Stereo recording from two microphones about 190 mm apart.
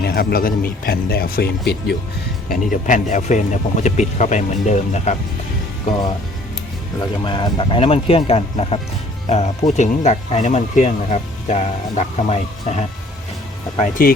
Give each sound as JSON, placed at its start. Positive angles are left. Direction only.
{"t": 0.0, "sound": "speech", "side_deg": 50}
{"t": 2.5, "sound": "speech", "side_deg": 40}
{"t": 7.3, "sound": "speech", "side_deg": 25}
{"t": 14.0, "sound": "speech", "side_deg": 50}